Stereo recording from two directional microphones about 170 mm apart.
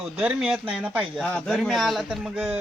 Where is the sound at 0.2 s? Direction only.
5° right (ahead or behind).